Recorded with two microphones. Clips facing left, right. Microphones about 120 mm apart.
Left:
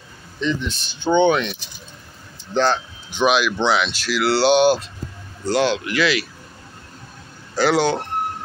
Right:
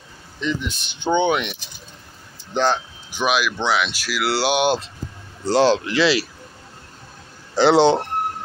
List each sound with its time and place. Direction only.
0.4 s speech: 10° right (ahead or behind)
3.2 s speech: 5° right (ahead or behind)
5.4 s speech: 30° right (ahead or behind)
7.5 s speech: 25° right (ahead or behind)